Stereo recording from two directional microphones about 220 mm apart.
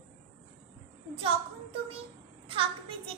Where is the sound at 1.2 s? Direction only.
25° right (ahead or behind).